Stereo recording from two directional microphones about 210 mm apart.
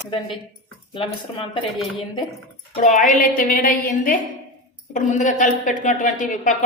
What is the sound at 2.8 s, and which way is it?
A woman's voice, 35° left (ahead or behind).